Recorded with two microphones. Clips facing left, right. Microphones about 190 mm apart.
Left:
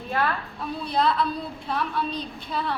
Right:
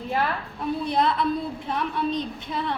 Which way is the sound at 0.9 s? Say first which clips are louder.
Even; 20° right (ahead or behind).